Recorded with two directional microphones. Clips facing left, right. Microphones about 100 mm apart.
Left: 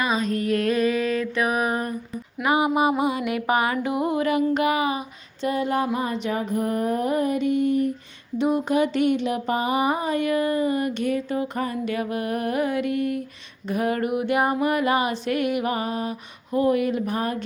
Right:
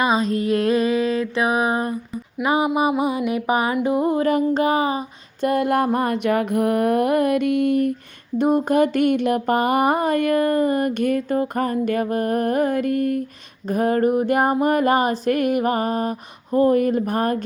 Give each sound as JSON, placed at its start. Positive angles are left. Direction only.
{"t": 0.0, "sound": "a sound", "side_deg": -35}
{"t": 0.3, "sound": "mantra", "side_deg": -30}
{"t": 2.4, "sound": "music", "side_deg": -25}
{"t": 4.0, "sound": "mantra", "side_deg": -35}
{"t": 5.4, "sound": "mantra", "side_deg": -55}
{"t": 8.4, "sound": "a sound", "side_deg": -45}